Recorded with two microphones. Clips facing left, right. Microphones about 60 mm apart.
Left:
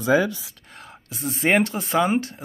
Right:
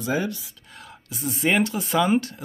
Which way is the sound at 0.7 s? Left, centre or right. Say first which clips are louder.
Even; left.